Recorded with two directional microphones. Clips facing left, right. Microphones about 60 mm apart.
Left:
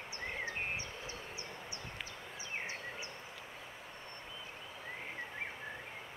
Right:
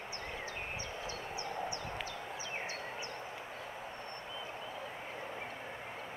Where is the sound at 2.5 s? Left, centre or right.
Left.